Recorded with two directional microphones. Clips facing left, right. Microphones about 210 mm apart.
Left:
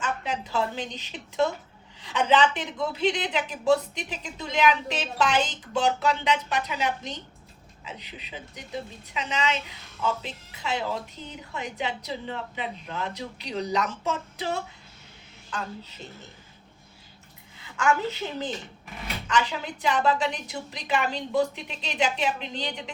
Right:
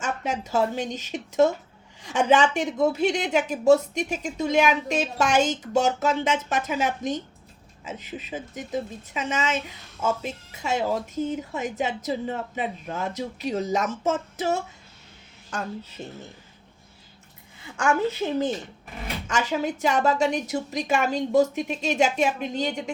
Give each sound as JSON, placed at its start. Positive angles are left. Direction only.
{"t": 0.0, "sound": "a woman's voice", "side_deg": -45}
{"t": 19.3, "sound": "a woman's voice", "side_deg": -45}